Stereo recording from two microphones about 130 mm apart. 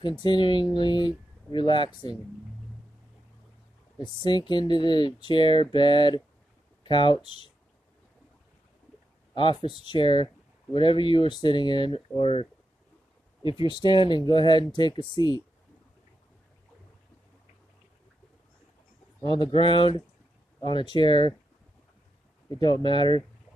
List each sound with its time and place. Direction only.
0.2 s speech: 35° left (ahead or behind)
4.0 s speech: 35° left (ahead or behind)
9.3 s speech: 40° left (ahead or behind)
19.3 s speech: 40° left (ahead or behind)
22.6 s speech: 40° left (ahead or behind)